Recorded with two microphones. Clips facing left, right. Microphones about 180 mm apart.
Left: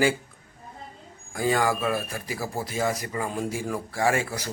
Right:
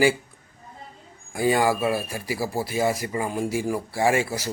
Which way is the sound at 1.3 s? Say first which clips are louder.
Right 3 dB; 10° right (ahead or behind).